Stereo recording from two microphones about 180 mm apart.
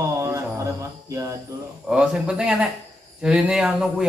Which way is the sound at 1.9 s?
5° right (ahead or behind).